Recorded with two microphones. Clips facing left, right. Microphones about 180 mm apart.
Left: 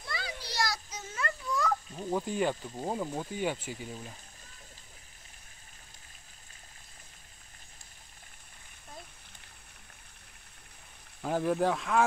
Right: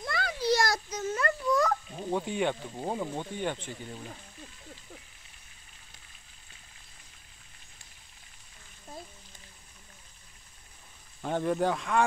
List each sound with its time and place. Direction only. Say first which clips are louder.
0.1 s a sound: right 12 dB; 55° right (ahead or behind)
2.0 s speech: right 1 dB; centre (ahead or behind)
11.2 s speech: even; centre (ahead or behind)